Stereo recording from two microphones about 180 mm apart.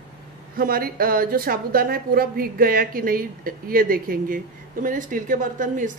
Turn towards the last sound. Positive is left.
turn(degrees=-45)  # may be behind; listen again after turning